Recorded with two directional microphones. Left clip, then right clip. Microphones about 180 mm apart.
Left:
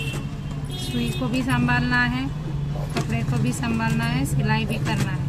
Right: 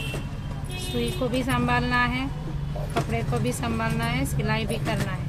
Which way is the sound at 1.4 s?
20° right (ahead or behind).